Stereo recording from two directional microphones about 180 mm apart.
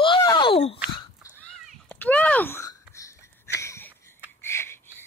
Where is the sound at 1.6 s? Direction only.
5° left (ahead or behind).